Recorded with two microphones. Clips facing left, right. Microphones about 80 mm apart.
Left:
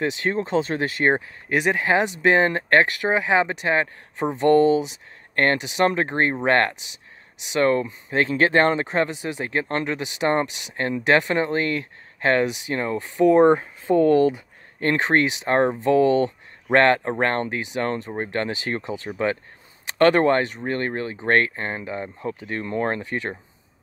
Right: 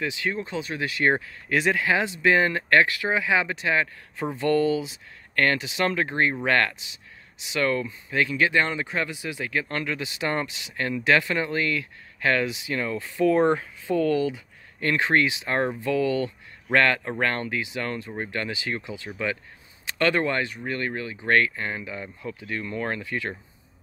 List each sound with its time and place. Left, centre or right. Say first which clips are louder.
0.0 s speech: left 5 dB; left
1.1 s speech: left 2 dB; left
13.8 s speech: left 6 dB; left